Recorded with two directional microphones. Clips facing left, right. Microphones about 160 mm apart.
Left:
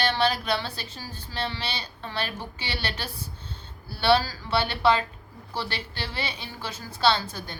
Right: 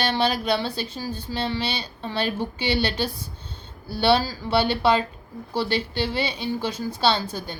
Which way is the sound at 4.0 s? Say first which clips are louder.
Right 2 dB; 15° right (ahead or behind).